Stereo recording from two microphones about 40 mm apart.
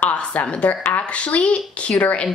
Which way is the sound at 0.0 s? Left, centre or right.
Left.